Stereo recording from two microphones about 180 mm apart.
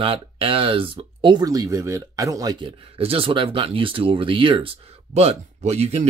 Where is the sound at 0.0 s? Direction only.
30° right (ahead or behind).